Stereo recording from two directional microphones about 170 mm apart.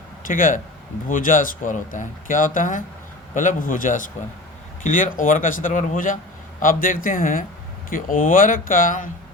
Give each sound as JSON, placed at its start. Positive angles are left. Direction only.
{"t": 0.3, "sound": "speech", "side_deg": 50}